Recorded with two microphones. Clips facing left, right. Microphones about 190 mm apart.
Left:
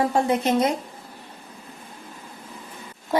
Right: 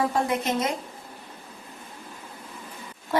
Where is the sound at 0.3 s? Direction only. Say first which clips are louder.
Left 5 dB; 30° left (ahead or behind).